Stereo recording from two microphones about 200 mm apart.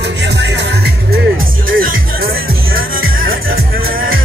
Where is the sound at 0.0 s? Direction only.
60° right (ahead or behind).